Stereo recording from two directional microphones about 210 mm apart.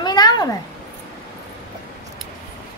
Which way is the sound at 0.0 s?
20° left (ahead or behind).